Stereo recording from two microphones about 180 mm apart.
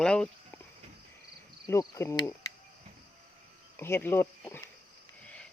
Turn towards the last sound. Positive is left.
turn(degrees=15)  # may be behind; listen again after turning